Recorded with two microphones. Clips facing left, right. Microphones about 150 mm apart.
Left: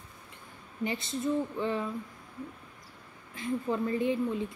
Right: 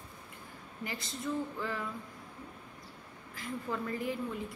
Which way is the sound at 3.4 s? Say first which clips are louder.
Left 7 dB; 20° left (ahead or behind).